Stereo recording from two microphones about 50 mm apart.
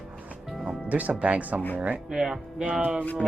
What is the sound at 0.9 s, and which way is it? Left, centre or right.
Speech, right.